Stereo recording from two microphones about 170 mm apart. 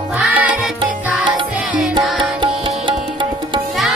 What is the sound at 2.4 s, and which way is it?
Music, 30° right (ahead or behind).